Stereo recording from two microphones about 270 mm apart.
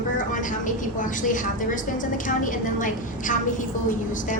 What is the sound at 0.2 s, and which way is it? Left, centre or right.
A woman's voice, left.